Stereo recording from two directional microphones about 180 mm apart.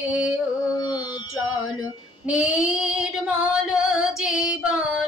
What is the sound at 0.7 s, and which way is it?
Music, 20° left (ahead or behind).